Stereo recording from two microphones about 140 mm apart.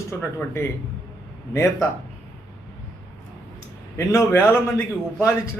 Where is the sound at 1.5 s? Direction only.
20° left (ahead or behind).